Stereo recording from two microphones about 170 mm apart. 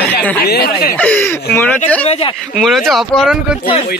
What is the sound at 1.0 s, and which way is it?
Speech, 10° left (ahead or behind).